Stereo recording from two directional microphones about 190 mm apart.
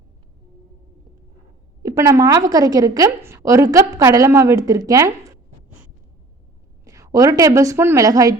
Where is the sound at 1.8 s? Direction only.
15° right (ahead or behind).